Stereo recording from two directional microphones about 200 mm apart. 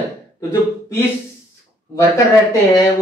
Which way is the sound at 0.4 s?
10° left (ahead or behind).